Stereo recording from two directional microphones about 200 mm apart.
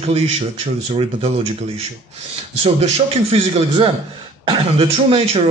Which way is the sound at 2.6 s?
30° right (ahead or behind).